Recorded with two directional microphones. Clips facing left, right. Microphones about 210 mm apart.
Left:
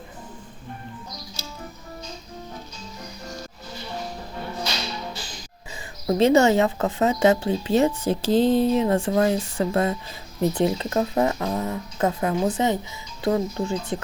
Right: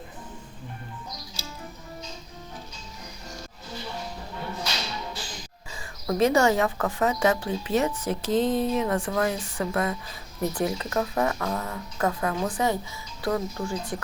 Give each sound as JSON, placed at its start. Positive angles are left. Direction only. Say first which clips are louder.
{"t": 6.1, "sound": "a woman's voice", "louder": "left 4 dB", "side_deg": 25}